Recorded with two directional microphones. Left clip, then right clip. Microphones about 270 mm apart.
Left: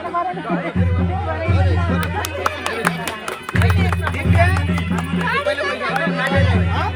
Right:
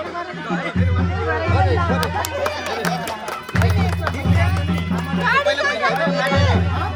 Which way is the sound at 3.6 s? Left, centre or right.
Right.